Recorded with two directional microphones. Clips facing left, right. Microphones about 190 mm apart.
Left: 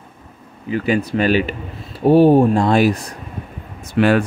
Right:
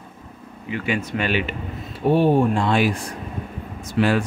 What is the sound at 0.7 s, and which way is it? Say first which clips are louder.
Speech: left 6 dB; 40° left (ahead or behind).